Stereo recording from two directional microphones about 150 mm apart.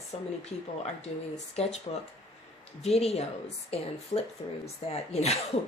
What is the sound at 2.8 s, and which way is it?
Speech, 45° left (ahead or behind).